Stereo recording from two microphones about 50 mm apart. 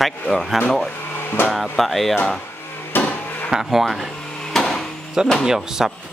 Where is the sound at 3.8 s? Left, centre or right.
Centre.